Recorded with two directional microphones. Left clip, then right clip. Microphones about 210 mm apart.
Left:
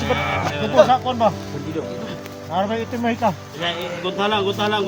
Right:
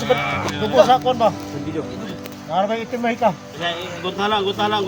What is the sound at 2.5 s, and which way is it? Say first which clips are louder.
Speech: right 2 dB; 50° right (ahead or behind).